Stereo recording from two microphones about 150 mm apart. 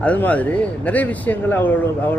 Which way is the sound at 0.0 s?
10° left (ahead or behind).